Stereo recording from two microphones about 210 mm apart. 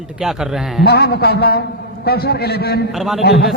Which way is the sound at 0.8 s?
50° left (ahead or behind).